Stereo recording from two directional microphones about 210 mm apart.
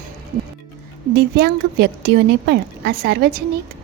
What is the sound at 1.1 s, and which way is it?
A woman's voice, 50° right (ahead or behind).